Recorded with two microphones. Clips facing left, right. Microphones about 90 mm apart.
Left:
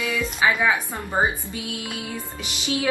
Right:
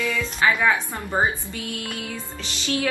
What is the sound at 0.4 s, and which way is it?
A woman's voice, 10° left (ahead or behind).